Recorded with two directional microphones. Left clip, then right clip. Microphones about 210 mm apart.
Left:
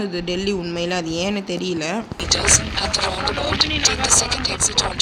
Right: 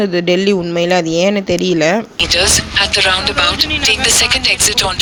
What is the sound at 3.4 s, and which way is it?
Speech, 90° right.